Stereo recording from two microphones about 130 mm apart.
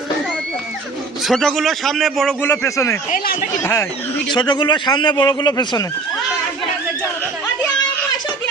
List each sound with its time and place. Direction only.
1.3 s a man's voice: centre (ahead or behind)
2.4 s speech: 20° left (ahead or behind)
4.3 s a man's voice: 35° left (ahead or behind)